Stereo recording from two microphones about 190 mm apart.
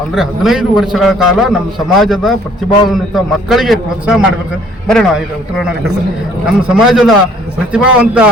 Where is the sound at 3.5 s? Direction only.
Centre (ahead or behind).